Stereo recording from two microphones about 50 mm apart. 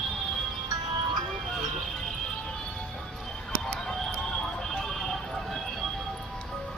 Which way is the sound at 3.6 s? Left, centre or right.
Centre.